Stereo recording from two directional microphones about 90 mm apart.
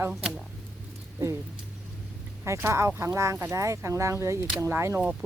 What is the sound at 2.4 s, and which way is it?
Speech, 30° right (ahead or behind).